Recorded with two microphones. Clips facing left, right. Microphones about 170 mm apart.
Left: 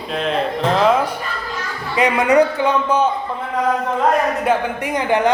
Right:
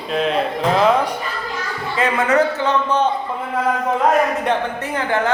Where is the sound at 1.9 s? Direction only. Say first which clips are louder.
Left 3 dB; 15° left (ahead or behind).